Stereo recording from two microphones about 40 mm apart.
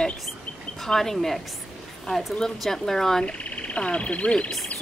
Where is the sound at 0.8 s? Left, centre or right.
Centre.